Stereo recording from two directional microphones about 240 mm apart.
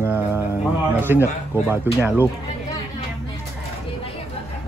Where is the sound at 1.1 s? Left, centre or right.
Centre.